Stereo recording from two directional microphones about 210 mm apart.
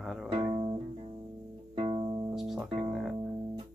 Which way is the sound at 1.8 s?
25° right (ahead or behind).